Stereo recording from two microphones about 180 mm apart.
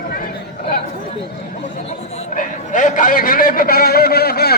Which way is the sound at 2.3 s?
45° left (ahead or behind).